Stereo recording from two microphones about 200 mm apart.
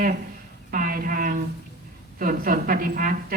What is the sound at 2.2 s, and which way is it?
Speech, 45° right (ahead or behind).